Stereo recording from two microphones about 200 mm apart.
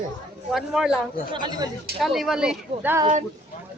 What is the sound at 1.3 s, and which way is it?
Speech, 20° right (ahead or behind).